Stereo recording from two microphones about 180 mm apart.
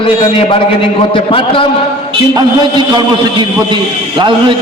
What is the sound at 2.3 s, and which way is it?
A man's voice, 25° right (ahead or behind).